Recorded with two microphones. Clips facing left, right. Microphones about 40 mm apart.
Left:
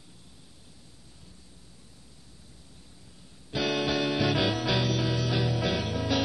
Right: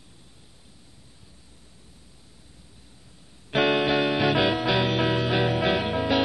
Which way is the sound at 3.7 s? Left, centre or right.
Right.